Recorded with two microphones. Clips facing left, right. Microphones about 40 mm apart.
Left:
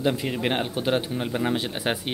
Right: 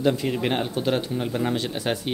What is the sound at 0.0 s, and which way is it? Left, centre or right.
Speech, centre.